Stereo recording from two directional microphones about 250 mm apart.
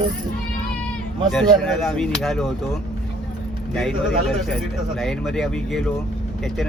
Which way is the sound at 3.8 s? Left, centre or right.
Centre.